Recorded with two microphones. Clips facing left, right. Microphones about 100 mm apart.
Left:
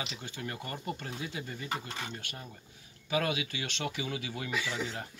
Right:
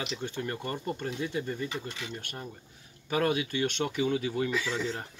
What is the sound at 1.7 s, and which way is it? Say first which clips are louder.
Speech: even; 45° left (ahead or behind).